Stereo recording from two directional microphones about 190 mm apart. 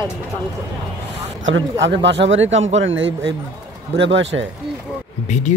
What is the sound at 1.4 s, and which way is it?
Speech, 80° right.